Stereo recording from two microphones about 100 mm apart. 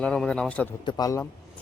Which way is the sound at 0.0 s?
10° left (ahead or behind).